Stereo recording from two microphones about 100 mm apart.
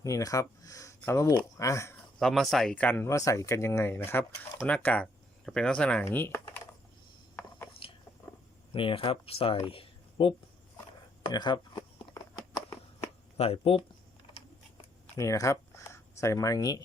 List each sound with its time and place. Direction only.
0.0 s speech: 35° left (ahead or behind)
2.1 s speech: centre (ahead or behind)
2.7 s speech: 20° left (ahead or behind)
6.1 s speech: 25° left (ahead or behind)
7.8 s a sound: 65° left (ahead or behind)
8.7 s speech: 60° left (ahead or behind)
9.6 s a sound: 60° left (ahead or behind)
11.2 s a sound: 50° left (ahead or behind)
13.3 s speech: 90° left
15.2 s speech: 35° left (ahead or behind)